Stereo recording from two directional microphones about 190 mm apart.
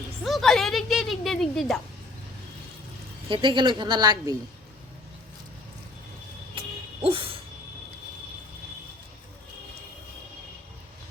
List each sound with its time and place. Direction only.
0.3 s speech: centre (ahead or behind)
3.2 s a woman's voice: 25° right (ahead or behind)
6.6 s music: 30° right (ahead or behind)